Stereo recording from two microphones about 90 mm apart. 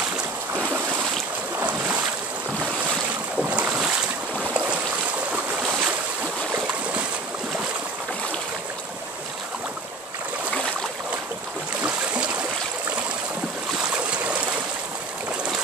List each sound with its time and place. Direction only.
1.6 s boat: 15° right (ahead or behind)
3.4 s boat: 15° right (ahead or behind)
4.4 s a sound: 15° right (ahead or behind)
11.8 s boat: 15° right (ahead or behind)
13.9 s stream: 15° right (ahead or behind)